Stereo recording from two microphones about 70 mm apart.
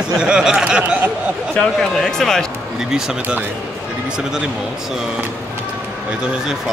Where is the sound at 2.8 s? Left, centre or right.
Centre.